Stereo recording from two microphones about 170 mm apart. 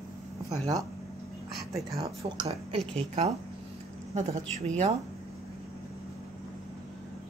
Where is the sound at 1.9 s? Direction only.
20° right (ahead or behind).